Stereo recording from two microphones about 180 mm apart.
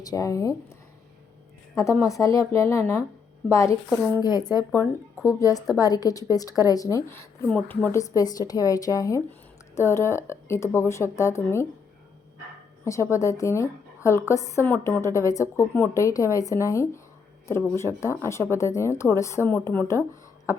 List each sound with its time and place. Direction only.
0.0 s speech: 20° left (ahead or behind)
1.7 s a woman's voice: 15° left (ahead or behind)
12.8 s a woman's voice: 15° left (ahead or behind)